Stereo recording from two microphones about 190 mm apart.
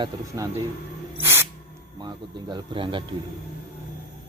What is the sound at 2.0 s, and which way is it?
A man's voice, 25° right (ahead or behind).